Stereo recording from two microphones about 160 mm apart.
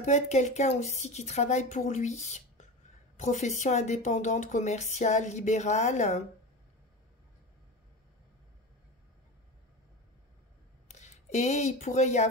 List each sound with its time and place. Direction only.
0.0 s speech: 45° left (ahead or behind)
10.9 s speech: 45° left (ahead or behind)